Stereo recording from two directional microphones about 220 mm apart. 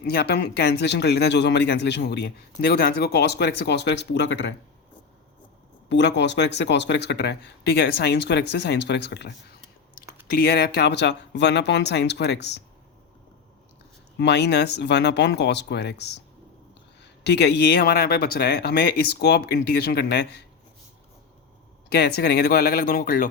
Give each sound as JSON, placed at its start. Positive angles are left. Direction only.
{"t": 0.0, "sound": "speech", "side_deg": 45}
{"t": 5.9, "sound": "speech", "side_deg": 50}
{"t": 14.2, "sound": "speech", "side_deg": 50}
{"t": 21.8, "sound": "speech", "side_deg": 45}